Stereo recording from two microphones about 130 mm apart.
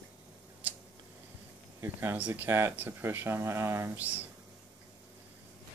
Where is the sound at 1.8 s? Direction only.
15° right (ahead or behind).